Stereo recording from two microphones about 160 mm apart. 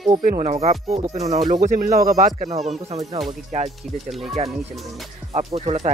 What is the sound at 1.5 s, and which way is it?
Speech, 55° right (ahead or behind).